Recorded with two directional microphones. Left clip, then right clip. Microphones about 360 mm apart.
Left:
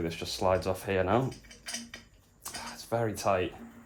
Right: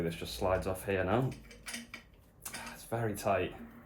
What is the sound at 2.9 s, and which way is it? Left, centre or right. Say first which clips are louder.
Speech: left 4 dB; centre.